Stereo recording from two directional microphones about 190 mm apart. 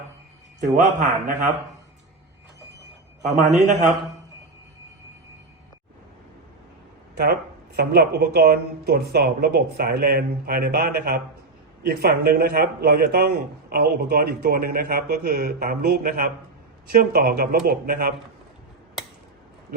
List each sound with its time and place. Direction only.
0.6 s a man's voice: 40° right (ahead or behind)
3.3 s a man's voice: 40° right (ahead or behind)
7.8 s a man's voice: 55° right (ahead or behind)